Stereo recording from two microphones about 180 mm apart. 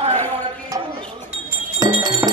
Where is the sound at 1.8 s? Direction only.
20° right (ahead or behind).